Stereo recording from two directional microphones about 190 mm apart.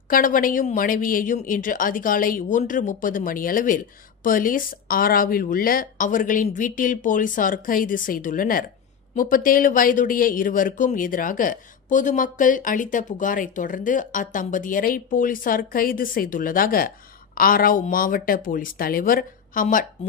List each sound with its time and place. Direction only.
0.1 s a woman's voice: 45° left (ahead or behind)